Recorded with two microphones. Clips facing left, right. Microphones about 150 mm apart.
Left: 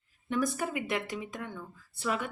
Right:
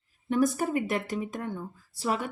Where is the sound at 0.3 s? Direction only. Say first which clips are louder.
Right 5 dB; 40° right (ahead or behind).